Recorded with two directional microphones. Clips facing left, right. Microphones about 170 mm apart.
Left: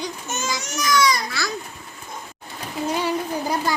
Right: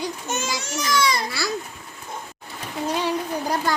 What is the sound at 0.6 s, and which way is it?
Baby cry, 30° right (ahead or behind).